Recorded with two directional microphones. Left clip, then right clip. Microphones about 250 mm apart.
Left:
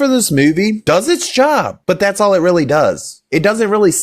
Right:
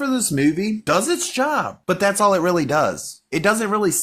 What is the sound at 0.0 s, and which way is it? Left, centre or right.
Speech, left.